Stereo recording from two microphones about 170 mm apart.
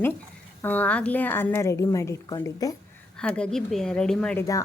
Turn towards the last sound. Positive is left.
turn(degrees=5)  # may be behind; listen again after turning